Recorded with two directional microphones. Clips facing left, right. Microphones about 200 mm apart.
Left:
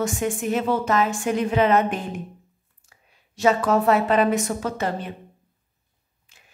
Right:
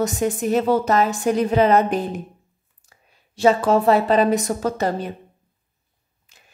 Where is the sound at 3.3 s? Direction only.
30° right (ahead or behind).